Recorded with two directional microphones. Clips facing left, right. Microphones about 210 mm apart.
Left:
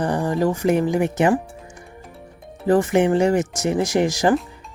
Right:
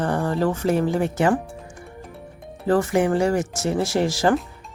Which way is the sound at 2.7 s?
20° left (ahead or behind).